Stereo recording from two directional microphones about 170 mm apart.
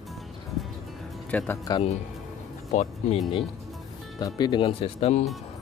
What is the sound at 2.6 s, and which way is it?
Speech, 40° left (ahead or behind).